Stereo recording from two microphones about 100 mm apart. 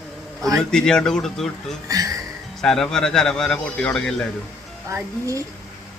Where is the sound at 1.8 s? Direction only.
35° right (ahead or behind).